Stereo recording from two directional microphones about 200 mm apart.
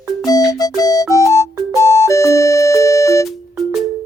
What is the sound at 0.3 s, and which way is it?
Music, 20° left (ahead or behind).